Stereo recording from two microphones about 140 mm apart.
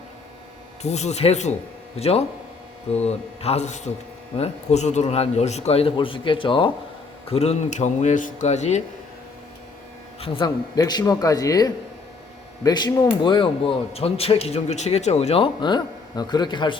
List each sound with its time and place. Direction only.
0.8 s a man's voice: 50° left (ahead or behind)
7.3 s speech: 50° left (ahead or behind)
10.2 s speech: 40° left (ahead or behind)
10.4 s a man's voice: 30° left (ahead or behind); by 15.4 s 50° left (ahead or behind)
15.6 s a man's voice: 30° left (ahead or behind)